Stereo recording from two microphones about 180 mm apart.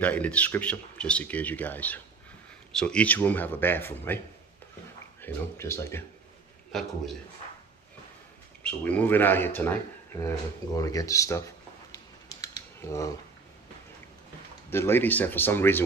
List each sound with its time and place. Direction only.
0.0 s speech: 10° left (ahead or behind)
5.2 s speech: 15° left (ahead or behind)
8.6 s speech: 10° left (ahead or behind)
10.2 s a sound: 20° left (ahead or behind)
14.7 s speech: 15° left (ahead or behind)